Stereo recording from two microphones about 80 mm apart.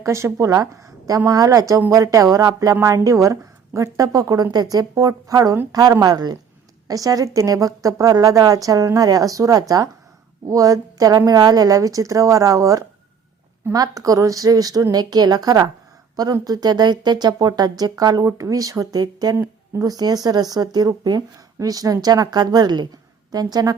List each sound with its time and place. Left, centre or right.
0.0 s a woman's voice: right